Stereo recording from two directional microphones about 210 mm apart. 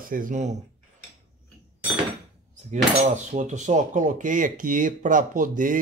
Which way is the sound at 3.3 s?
35° right (ahead or behind).